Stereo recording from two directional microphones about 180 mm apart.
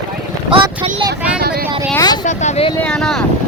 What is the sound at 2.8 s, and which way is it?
Speech, 5° left (ahead or behind).